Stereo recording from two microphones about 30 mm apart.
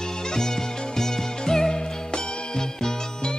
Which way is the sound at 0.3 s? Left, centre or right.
Centre.